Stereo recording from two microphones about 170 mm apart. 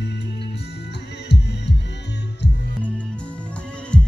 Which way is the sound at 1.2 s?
90° left.